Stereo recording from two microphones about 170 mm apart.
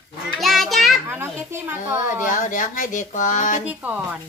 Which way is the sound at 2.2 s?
50° left (ahead or behind).